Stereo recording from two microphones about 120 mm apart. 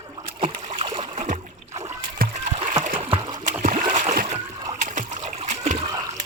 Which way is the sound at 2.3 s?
70° right (ahead or behind).